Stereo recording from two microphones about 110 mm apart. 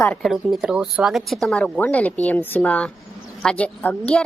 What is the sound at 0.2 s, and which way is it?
A woman's voice, centre (ahead or behind).